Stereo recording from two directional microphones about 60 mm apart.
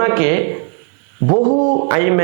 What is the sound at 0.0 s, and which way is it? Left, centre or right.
A man's voice, right.